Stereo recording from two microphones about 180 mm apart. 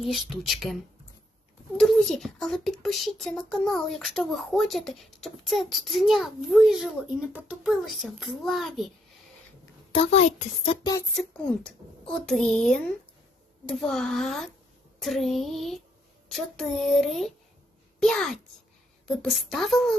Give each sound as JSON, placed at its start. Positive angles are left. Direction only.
{"t": 0.0, "sound": "a child's voice", "side_deg": 0}
{"t": 1.8, "sound": "a child's voice", "side_deg": 5}
{"t": 9.9, "sound": "a child's voice", "side_deg": 35}
{"t": 11.1, "sound": "a child's voice", "side_deg": 5}